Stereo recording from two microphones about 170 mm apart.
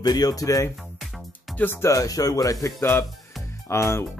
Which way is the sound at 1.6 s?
15° left (ahead or behind).